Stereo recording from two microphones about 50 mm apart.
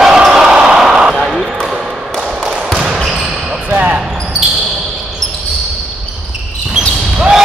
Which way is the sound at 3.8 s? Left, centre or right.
Right.